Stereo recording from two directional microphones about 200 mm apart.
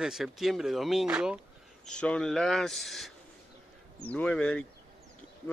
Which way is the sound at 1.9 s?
5° left (ahead or behind).